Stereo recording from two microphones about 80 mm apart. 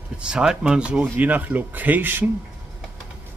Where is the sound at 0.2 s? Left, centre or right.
Centre.